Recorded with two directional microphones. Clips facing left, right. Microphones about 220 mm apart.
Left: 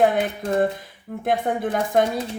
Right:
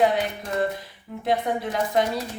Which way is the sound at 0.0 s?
50° left (ahead or behind).